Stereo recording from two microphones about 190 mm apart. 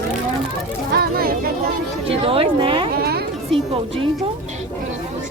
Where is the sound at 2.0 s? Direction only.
30° right (ahead or behind).